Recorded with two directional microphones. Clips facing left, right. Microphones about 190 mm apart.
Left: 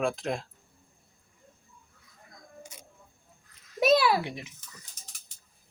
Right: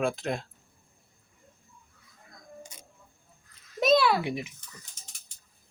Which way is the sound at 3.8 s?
5° left (ahead or behind).